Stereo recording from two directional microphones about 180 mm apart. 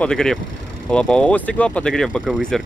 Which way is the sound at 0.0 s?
5° left (ahead or behind).